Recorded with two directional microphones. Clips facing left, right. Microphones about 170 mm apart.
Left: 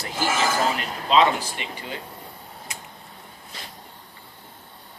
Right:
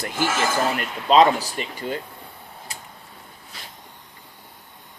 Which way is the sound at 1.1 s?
40° right (ahead or behind).